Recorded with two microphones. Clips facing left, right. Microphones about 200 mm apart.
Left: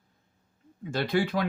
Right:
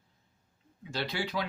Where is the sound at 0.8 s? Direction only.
50° left (ahead or behind).